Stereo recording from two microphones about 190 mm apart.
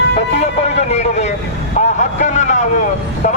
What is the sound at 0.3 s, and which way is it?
A man's voice, 35° left (ahead or behind).